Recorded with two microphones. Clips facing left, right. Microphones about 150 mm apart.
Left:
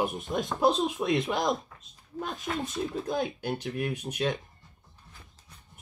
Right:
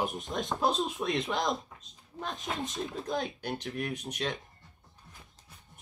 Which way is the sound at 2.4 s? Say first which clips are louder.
Left 3 dB; 20° right (ahead or behind).